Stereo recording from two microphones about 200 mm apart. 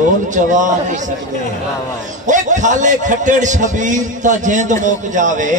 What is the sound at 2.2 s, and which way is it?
A man's voice, 40° right (ahead or behind).